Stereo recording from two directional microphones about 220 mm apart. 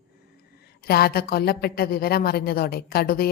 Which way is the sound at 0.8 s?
45° left (ahead or behind).